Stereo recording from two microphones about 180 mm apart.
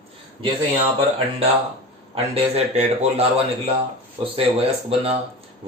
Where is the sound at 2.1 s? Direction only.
35° right (ahead or behind).